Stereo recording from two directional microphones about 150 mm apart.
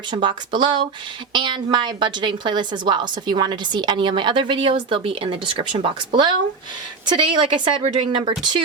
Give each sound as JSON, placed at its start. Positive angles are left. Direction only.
{"t": 0.1, "sound": "a woman's voice", "side_deg": -30}